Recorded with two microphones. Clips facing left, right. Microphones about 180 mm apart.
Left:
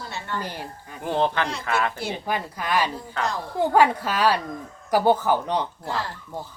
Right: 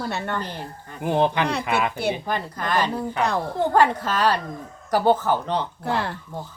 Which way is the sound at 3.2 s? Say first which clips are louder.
Right 3 dB; 60° right (ahead or behind).